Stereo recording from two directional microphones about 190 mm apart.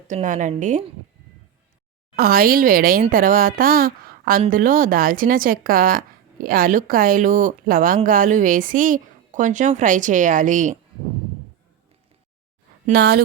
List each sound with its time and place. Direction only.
0.1 s a woman's voice: 40° right (ahead or behind)
2.1 s a woman's voice: 50° right (ahead or behind)
12.8 s speech: 55° right (ahead or behind)